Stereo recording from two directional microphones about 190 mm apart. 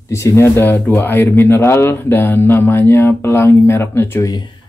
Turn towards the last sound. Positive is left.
turn(degrees=15)  # may be behind; listen again after turning